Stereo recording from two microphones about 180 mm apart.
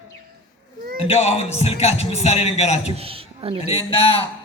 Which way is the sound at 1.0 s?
35° left (ahead or behind).